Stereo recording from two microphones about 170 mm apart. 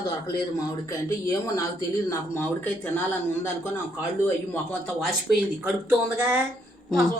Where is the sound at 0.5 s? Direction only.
15° left (ahead or behind).